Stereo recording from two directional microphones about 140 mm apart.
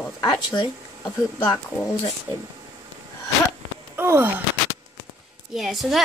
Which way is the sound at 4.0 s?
15° right (ahead or behind).